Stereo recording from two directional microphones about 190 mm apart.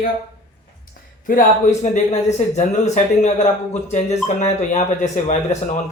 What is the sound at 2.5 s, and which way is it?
Speech, 35° left (ahead or behind).